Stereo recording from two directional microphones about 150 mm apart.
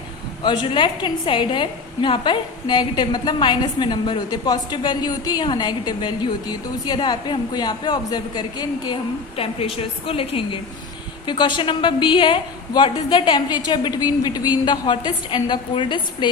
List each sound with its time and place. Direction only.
0.4 s a woman's voice: 30° left (ahead or behind)
9.3 s a woman's voice: 40° left (ahead or behind)